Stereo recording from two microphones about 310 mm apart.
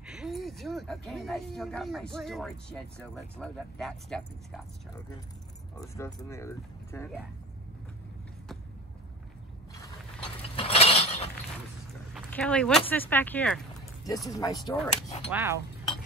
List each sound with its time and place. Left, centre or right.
0.0 s speech: centre
5.8 s speech: centre
10.5 s a sound: centre
12.1 s speech: centre; by 15.2 s left
15.3 s speech: centre